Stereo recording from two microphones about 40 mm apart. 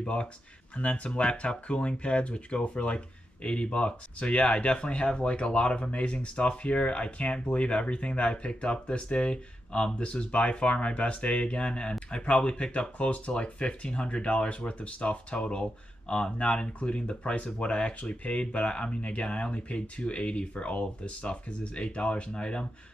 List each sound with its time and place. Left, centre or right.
0.0 s speech: left